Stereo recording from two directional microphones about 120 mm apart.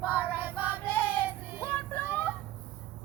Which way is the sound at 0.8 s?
15° left (ahead or behind).